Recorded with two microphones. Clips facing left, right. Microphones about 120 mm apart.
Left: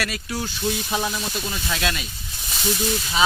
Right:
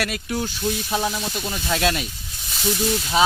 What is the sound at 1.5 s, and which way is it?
Speech, 30° right (ahead or behind).